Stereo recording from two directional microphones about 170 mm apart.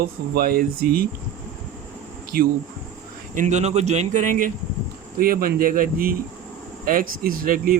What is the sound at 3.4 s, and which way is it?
Speech, 45° right (ahead or behind).